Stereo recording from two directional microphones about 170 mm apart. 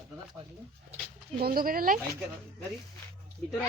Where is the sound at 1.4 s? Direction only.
60° right (ahead or behind).